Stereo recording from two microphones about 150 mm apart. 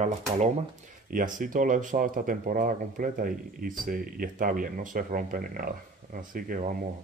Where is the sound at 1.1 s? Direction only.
65° right (ahead or behind).